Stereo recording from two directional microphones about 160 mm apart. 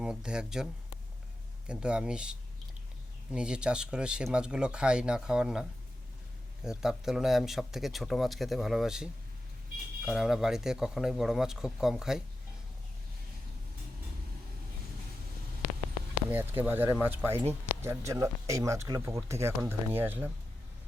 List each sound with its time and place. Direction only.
0.0 s speech: 5° right (ahead or behind)
6.7 s speech: 5° right (ahead or behind)
10.1 s speech: 5° right (ahead or behind)
16.3 s speech: 10° right (ahead or behind)